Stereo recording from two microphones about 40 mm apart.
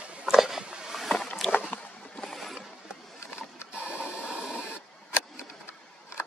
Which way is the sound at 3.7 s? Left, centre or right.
Right.